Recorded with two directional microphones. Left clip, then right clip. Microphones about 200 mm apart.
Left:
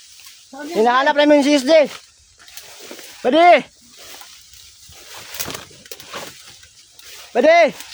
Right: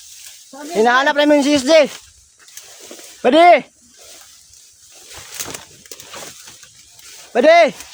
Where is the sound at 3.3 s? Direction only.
10° right (ahead or behind).